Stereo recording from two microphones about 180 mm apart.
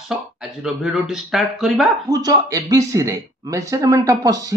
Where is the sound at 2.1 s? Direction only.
20° right (ahead or behind).